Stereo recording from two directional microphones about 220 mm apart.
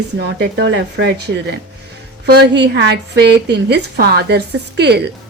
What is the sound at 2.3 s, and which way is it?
A woman's voice, 50° right (ahead or behind).